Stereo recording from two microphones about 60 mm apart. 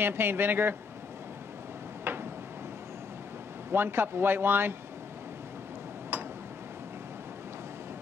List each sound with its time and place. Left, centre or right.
0.0 s speech: right
2.1 s a sound: right
3.7 s speech: right